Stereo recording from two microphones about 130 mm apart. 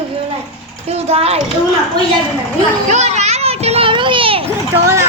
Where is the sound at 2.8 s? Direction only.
60° right (ahead or behind); by 4.4 s 40° right (ahead or behind).